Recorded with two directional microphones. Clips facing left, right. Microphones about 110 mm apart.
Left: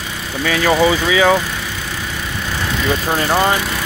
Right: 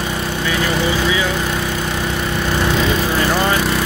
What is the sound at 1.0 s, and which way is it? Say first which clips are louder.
Speech: left 5 dB; 90° left.